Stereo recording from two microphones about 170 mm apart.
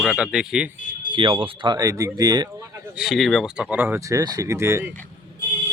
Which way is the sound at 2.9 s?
Centre (ahead or behind).